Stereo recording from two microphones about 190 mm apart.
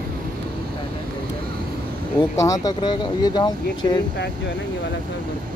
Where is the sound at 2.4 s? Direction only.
20° left (ahead or behind).